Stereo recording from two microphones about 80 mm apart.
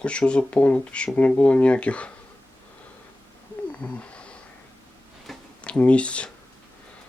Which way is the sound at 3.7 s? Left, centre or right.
Centre.